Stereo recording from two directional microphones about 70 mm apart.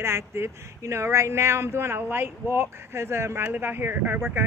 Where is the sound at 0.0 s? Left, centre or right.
Right.